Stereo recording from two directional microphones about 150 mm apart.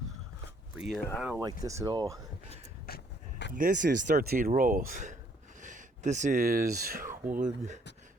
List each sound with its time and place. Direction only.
0.8 s speech: centre (ahead or behind)
1.6 s speech: 20° right (ahead or behind)
2.9 s a sound: 90° left
3.5 s speech: 60° right (ahead or behind); by 7.1 s 80° right
7.3 s speech: 55° right (ahead or behind)